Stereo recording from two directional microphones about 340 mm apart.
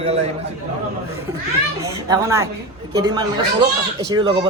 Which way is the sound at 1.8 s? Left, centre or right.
Centre.